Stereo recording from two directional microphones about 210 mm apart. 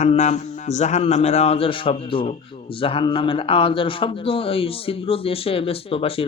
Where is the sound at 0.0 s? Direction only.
35° left (ahead or behind).